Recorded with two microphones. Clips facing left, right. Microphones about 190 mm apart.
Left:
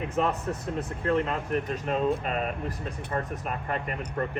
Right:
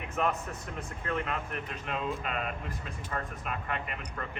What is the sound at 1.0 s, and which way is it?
Speech, 35° left (ahead or behind).